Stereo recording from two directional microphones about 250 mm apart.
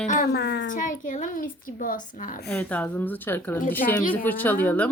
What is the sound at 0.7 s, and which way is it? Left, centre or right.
Speech, left.